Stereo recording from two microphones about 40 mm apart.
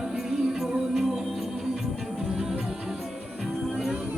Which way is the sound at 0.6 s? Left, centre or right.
Centre.